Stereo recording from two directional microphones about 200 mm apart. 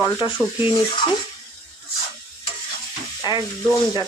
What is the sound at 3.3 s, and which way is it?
Speech, 25° left (ahead or behind).